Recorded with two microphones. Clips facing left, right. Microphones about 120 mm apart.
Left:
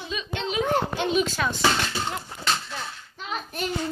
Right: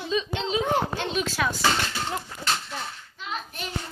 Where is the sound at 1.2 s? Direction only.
5° right (ahead or behind).